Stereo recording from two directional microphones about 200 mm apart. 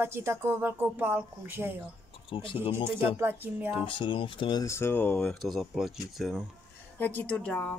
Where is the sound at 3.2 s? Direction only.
10° right (ahead or behind).